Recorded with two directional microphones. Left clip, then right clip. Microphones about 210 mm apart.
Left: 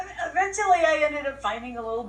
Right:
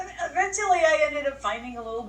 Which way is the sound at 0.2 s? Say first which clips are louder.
Left 1 dB; 10° left (ahead or behind).